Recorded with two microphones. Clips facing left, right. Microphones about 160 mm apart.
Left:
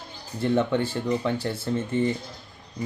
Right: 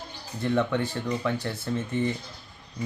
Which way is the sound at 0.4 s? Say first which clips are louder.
Left 2 dB; 30° left (ahead or behind).